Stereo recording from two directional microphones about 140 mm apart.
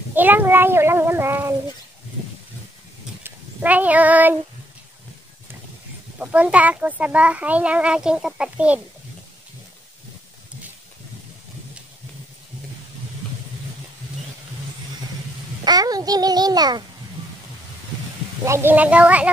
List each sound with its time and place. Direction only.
0.1 s a child's voice: 15° right (ahead or behind)
3.3 s speech: 10° right (ahead or behind)
6.1 s a child's voice: 10° right (ahead or behind)
15.6 s a child's voice: 30° right (ahead or behind)
18.4 s a child's voice: 20° right (ahead or behind)